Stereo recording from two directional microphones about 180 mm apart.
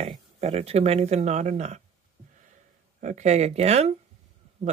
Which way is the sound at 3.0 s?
40° right (ahead or behind).